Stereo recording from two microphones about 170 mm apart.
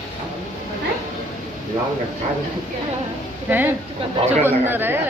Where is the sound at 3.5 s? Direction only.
10° right (ahead or behind).